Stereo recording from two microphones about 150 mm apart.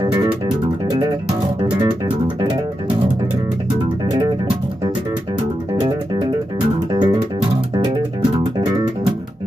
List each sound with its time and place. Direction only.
1.6 s music: 30° right (ahead or behind)
6.9 s music: 30° right (ahead or behind)